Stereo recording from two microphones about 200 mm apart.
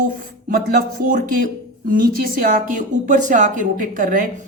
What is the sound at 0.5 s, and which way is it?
A woman's voice, 45° right (ahead or behind).